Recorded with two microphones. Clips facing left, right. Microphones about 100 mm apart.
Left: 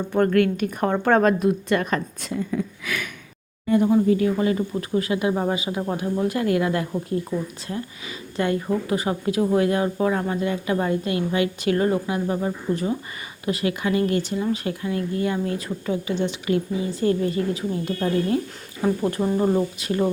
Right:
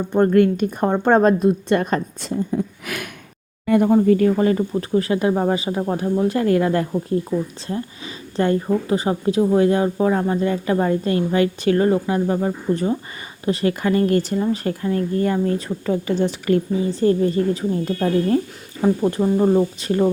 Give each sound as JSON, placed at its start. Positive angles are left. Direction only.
{"t": 0.1, "sound": "speech", "side_deg": -25}
{"t": 3.7, "sound": "speech", "side_deg": -60}
{"t": 18.8, "sound": "speech", "side_deg": -20}
{"t": 19.8, "sound": "speech", "side_deg": -35}